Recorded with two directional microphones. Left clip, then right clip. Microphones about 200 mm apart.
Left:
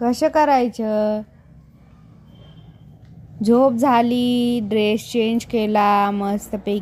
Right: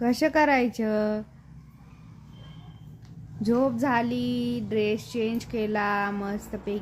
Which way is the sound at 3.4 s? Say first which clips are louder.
Left 9 dB; 20° left (ahead or behind).